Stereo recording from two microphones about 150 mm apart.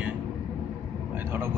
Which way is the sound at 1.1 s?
15° right (ahead or behind).